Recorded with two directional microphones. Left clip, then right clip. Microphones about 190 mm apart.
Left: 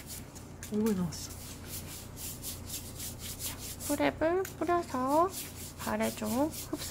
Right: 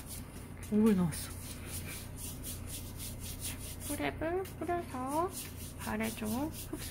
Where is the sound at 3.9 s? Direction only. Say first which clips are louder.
Left 6 dB; 40° left (ahead or behind).